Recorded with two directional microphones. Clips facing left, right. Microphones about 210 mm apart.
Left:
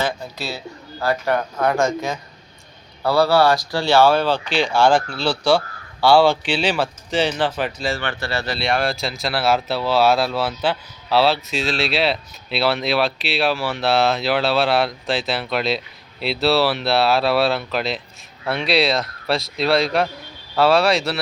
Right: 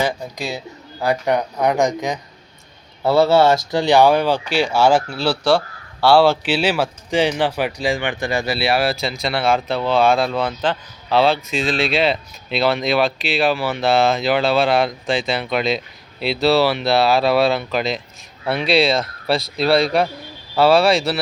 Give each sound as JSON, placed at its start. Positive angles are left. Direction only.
{"t": 0.0, "sound": "speech", "side_deg": -15}